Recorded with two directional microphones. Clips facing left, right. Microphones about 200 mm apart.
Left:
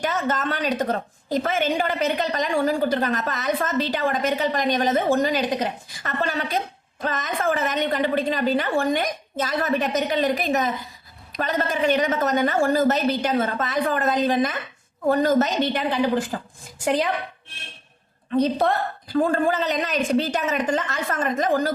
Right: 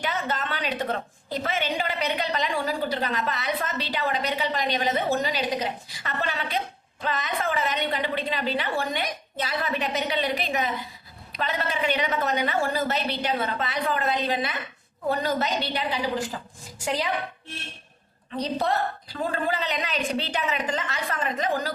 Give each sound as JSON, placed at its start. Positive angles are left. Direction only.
{"t": 0.0, "sound": "a woman's voice", "side_deg": 45}
{"t": 18.3, "sound": "a woman's voice", "side_deg": 50}